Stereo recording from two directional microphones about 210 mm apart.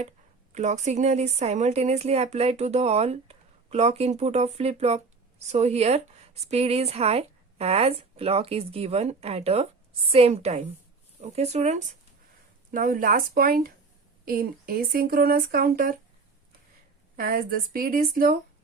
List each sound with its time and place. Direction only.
0.5 s speech: 35° right (ahead or behind)
17.2 s speech: 45° right (ahead or behind)